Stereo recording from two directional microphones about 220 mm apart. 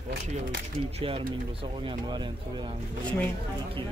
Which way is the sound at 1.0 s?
25° right (ahead or behind).